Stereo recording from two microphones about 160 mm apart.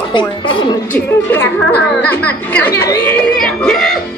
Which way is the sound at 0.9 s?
15° left (ahead or behind).